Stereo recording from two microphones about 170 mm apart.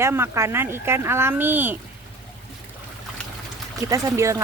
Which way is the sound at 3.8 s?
20° right (ahead or behind).